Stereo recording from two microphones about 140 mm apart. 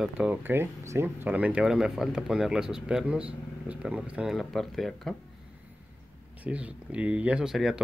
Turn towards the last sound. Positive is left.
turn(degrees=-5)  # may be behind; listen again after turning